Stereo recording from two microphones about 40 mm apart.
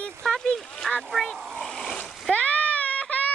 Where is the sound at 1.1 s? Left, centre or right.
Centre.